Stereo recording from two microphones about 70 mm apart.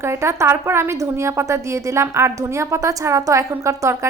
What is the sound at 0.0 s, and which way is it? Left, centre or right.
A woman's voice, right.